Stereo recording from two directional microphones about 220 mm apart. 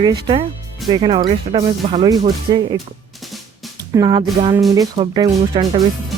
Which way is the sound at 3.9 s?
20° right (ahead or behind).